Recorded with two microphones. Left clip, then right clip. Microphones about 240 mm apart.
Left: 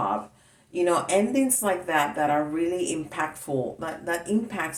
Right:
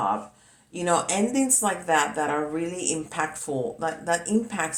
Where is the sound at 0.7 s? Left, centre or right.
Centre.